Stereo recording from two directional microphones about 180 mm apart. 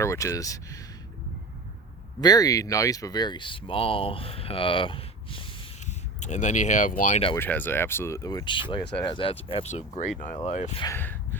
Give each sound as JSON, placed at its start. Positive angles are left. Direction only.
{"t": 0.0, "sound": "speech", "side_deg": 15}
{"t": 2.2, "sound": "speech", "side_deg": 20}
{"t": 7.3, "sound": "speech", "side_deg": 10}
{"t": 10.8, "sound": "speech", "side_deg": 10}